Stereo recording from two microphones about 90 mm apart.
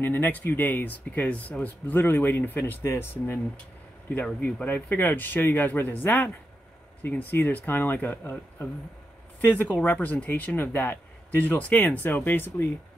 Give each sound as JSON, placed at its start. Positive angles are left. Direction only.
{"t": 0.0, "sound": "speech", "side_deg": 20}
{"t": 4.4, "sound": "speech", "side_deg": 20}